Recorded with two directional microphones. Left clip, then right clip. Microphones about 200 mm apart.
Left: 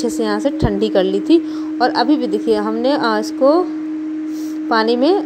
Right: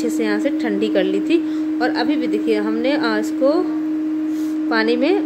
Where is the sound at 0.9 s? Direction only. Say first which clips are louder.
Left 5 dB; 15° left (ahead or behind).